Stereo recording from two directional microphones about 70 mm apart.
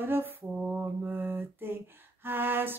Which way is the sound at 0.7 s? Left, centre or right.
Right.